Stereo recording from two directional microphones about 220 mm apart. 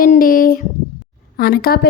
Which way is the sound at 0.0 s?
40° left (ahead or behind).